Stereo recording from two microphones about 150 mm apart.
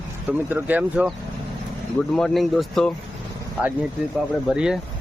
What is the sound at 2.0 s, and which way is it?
Speech, 5° left (ahead or behind).